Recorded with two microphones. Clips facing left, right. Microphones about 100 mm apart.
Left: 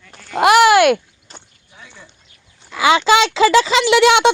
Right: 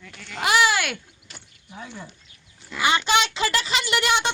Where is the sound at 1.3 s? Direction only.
35° left (ahead or behind).